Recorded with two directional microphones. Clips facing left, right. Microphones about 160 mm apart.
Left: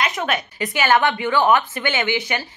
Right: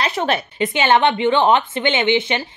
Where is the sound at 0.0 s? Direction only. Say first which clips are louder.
Right 3 dB; 30° right (ahead or behind).